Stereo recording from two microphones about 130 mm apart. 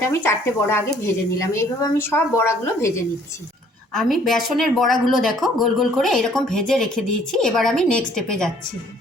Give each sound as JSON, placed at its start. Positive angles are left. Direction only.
{"t": 0.1, "sound": "a woman's voice", "side_deg": 20}
{"t": 3.9, "sound": "speech", "side_deg": 0}